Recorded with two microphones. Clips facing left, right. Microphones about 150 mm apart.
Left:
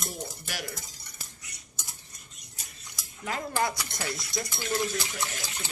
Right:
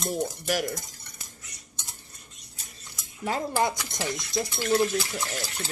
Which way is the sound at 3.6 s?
20° right (ahead or behind).